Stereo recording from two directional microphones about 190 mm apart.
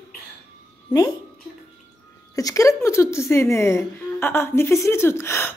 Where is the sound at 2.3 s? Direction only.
20° left (ahead or behind).